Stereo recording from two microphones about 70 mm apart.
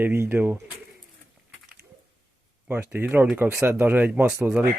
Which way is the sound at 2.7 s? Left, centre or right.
Right.